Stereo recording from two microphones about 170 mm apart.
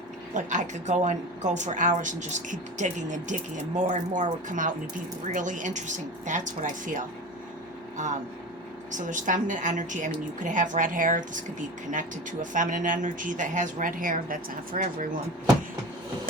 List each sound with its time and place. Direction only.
0.3 s speech: 45° right (ahead or behind)
8.9 s speech: 50° right (ahead or behind)